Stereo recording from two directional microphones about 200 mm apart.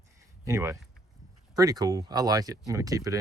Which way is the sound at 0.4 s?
15° right (ahead or behind).